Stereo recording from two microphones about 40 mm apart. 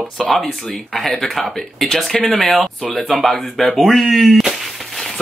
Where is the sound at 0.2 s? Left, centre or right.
Centre.